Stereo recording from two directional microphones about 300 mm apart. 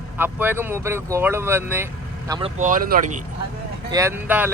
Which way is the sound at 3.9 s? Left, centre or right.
Centre.